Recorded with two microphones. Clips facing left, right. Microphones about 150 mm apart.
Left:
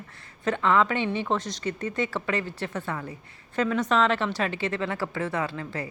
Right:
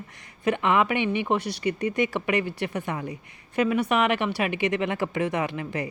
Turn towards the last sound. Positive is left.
turn(degrees=-15)  # may be behind; listen again after turning